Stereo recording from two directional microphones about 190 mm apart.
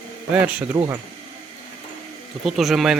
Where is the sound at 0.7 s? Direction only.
20° right (ahead or behind).